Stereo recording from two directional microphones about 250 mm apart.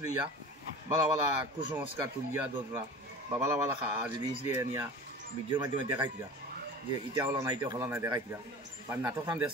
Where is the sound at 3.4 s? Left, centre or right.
Centre.